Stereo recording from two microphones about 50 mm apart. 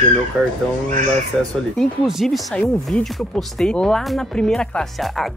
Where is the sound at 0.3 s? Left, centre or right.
Centre.